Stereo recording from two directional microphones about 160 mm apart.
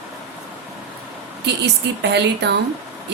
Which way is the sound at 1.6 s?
90° right.